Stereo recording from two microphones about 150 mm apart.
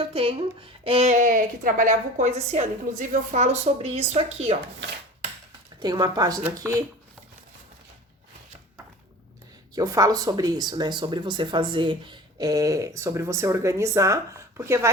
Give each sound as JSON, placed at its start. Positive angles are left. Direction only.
{"t": 0.0, "sound": "a woman's voice", "side_deg": -40}
{"t": 5.8, "sound": "speech", "side_deg": -25}
{"t": 9.7, "sound": "speech", "side_deg": -25}